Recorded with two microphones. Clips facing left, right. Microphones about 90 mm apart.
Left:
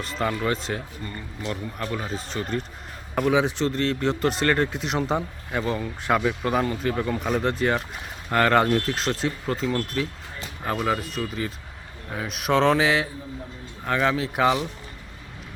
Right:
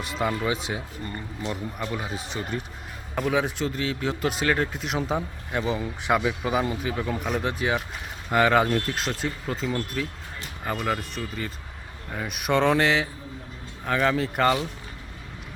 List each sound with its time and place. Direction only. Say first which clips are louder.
0.0 s speech: left 1 dB; 10° right (ahead or behind)
1.0 s speech: right 1 dB; 25° right (ahead or behind)
1.8 s speech: left 1 dB; 10° right (ahead or behind)